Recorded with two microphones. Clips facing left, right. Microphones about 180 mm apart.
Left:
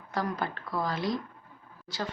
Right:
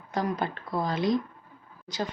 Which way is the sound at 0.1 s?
20° right (ahead or behind).